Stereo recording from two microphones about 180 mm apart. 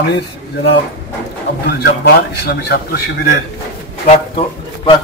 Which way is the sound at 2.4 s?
60° left (ahead or behind).